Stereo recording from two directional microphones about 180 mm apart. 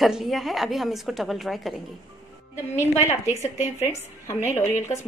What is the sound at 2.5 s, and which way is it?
A woman's voice, 15° left (ahead or behind).